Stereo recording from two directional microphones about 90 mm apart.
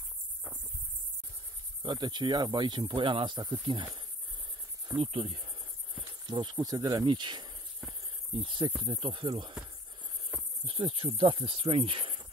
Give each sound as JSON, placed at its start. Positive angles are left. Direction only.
{"t": 1.8, "sound": "speech", "side_deg": -55}
{"t": 4.9, "sound": "cricket", "side_deg": -85}
{"t": 6.2, "sound": "insect", "side_deg": -55}
{"t": 8.4, "sound": "speech", "side_deg": -65}
{"t": 10.7, "sound": "speech", "side_deg": -80}
{"t": 11.1, "sound": "speech", "side_deg": -90}